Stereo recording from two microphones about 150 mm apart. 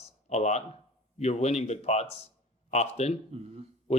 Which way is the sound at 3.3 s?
45° right (ahead or behind).